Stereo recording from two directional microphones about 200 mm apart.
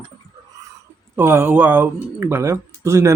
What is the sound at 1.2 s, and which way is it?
Speech, 10° right (ahead or behind).